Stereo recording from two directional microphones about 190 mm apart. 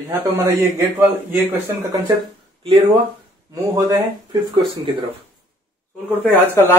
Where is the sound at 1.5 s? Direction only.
10° right (ahead or behind).